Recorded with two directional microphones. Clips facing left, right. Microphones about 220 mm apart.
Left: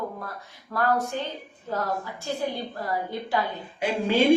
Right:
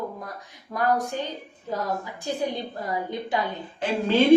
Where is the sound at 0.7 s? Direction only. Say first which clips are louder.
Right 1 dB; 15° right (ahead or behind).